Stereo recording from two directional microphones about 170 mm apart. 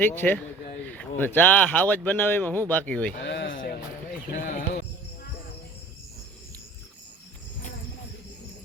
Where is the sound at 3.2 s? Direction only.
90° left; by 3.7 s 75° left (ahead or behind).